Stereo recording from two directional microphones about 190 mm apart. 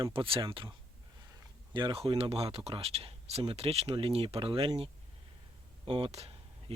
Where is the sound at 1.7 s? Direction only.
25° right (ahead or behind).